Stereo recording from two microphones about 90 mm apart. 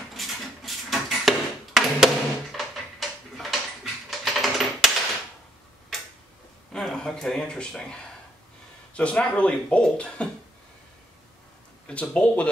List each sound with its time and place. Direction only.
0.1 s a sound: centre (ahead or behind)
6.7 s speech: 5° left (ahead or behind)
11.9 s speech: 15° left (ahead or behind)